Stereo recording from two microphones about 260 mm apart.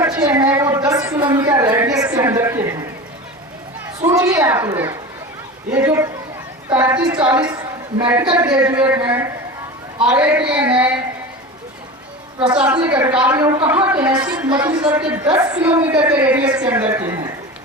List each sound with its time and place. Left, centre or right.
0.0 s a sound: centre
4.0 s a woman's voice: centre
12.4 s a woman's voice: centre